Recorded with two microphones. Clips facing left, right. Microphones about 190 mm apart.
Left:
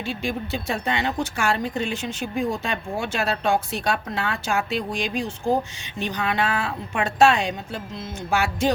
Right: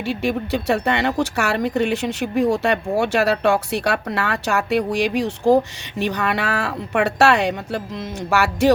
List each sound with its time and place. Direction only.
0.0 s speech: 65° right (ahead or behind)